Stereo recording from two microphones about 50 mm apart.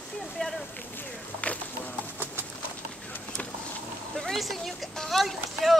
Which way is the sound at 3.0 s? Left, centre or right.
Left.